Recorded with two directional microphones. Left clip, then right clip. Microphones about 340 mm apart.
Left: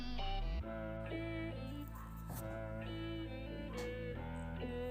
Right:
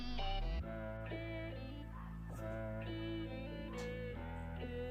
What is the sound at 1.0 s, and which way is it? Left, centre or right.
Music, right.